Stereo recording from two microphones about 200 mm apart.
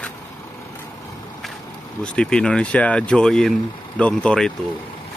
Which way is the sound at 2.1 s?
5° left (ahead or behind).